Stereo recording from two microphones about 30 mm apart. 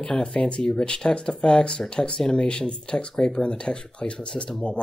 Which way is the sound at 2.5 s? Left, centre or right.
Left.